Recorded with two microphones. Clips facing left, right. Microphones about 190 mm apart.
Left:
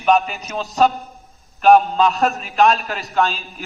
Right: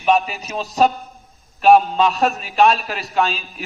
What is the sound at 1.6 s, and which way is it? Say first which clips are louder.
Speech: even; centre (ahead or behind).